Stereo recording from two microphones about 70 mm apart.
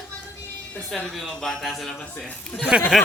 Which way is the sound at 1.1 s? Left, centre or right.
Centre.